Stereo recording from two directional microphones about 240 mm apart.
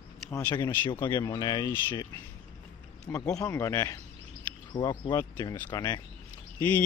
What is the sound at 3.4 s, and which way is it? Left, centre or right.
Speech, centre.